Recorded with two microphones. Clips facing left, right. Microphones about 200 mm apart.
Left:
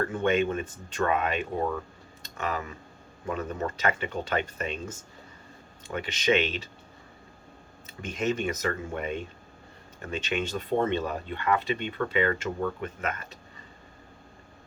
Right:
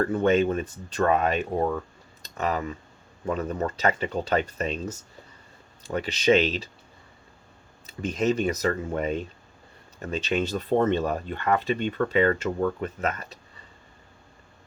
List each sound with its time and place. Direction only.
0.0 s speech: 35° right (ahead or behind)
8.1 s speech: 35° right (ahead or behind)